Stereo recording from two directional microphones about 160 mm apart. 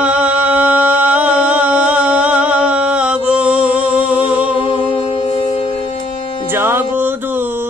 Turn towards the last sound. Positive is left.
turn(degrees=-15)  # may be behind; listen again after turning